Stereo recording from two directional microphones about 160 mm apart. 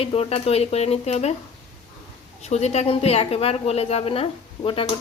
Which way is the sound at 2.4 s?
45° left (ahead or behind).